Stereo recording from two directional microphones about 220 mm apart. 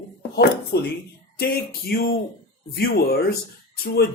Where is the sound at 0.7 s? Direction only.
45° left (ahead or behind).